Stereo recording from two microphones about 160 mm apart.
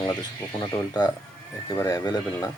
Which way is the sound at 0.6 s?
25° left (ahead or behind).